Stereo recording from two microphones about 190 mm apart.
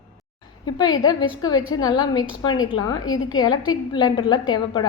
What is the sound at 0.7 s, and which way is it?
A woman's voice, 20° left (ahead or behind).